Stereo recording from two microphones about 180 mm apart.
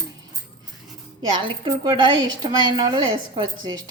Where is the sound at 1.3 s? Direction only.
30° right (ahead or behind).